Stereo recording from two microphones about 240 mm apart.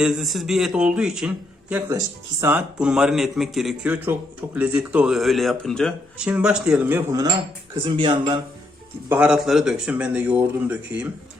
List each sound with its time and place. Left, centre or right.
0.0 s speech: centre
9.0 s speech: centre